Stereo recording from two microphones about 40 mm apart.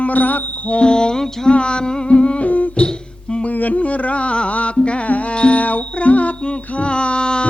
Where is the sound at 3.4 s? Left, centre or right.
Left.